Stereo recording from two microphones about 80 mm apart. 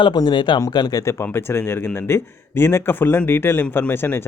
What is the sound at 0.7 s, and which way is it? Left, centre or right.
Speech, left.